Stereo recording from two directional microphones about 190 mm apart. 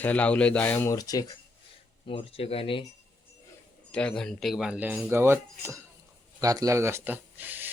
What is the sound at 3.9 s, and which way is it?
Speech, 5° left (ahead or behind).